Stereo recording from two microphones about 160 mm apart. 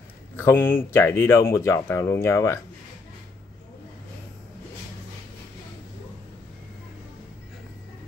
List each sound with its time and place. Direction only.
0.4 s speech: 15° left (ahead or behind)